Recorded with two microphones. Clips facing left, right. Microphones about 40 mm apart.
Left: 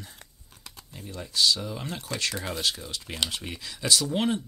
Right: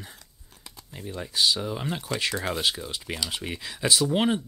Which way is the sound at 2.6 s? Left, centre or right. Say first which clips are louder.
Right 2 dB; centre.